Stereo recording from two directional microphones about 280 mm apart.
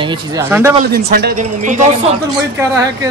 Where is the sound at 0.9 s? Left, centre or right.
Right.